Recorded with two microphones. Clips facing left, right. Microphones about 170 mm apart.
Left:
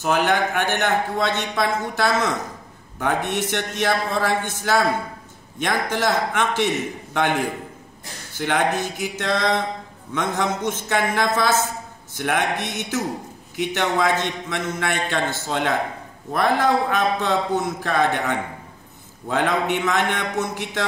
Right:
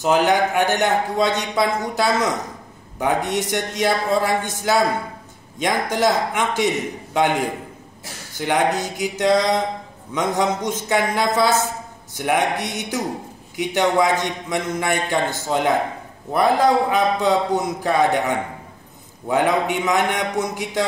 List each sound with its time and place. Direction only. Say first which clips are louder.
0.0 s a man's voice: right 3 dB; 15° right (ahead or behind)
8.5 s a man's voice: right 2 dB; 15° right (ahead or behind)
19.2 s a man's voice: right 3 dB; 15° right (ahead or behind)